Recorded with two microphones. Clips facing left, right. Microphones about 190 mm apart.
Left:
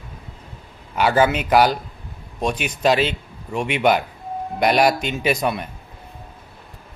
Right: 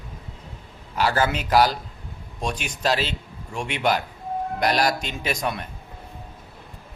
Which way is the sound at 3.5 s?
5° left (ahead or behind).